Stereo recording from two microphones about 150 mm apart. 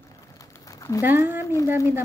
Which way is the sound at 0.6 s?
20° left (ahead or behind).